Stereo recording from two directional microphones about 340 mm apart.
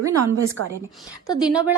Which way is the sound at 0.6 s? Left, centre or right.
Right.